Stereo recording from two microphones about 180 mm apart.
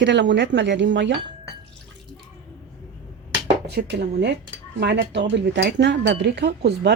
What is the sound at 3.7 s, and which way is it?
A woman's voice, 70° right (ahead or behind).